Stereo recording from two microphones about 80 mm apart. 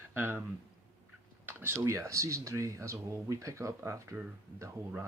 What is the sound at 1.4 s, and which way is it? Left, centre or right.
Speech, right.